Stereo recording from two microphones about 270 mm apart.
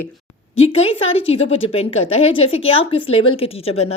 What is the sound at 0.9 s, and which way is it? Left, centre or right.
A woman's voice, left.